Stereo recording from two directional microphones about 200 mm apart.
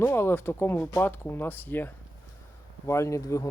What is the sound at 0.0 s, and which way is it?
Speech, 10° left (ahead or behind).